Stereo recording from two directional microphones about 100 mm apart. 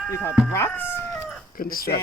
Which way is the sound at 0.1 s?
25° left (ahead or behind).